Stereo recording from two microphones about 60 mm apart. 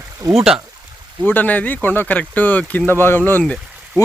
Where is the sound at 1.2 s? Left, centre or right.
Left.